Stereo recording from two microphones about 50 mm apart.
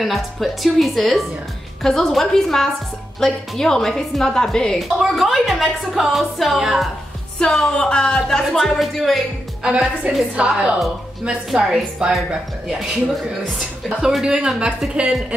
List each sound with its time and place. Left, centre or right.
0.0 s a woman's voice: centre
4.7 s speech: centre
6.6 s a woman's voice: centre
7.5 s a woman's voice: centre
8.5 s speech: centre
9.6 s a woman's voice: centre
11.2 s a woman's voice: centre
12.0 s a woman's voice: centre
13.6 s a woman's voice: centre